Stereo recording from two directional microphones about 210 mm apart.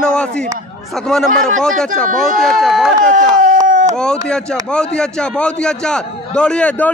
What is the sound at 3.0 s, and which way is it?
Speech, 40° right (ahead or behind).